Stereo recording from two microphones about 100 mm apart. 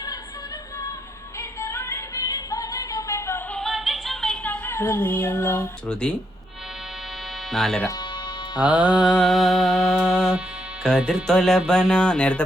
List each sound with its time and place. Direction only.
1.4 s music: 30° left (ahead or behind)
3.5 s music: centre (ahead or behind)
4.4 s music: 20° left (ahead or behind)
5.9 s speech: 10° left (ahead or behind)
7.5 s music: 5° left (ahead or behind)
7.9 s music: 45° left (ahead or behind)
8.6 s music: 15° right (ahead or behind); by 12.5 s 10° left (ahead or behind)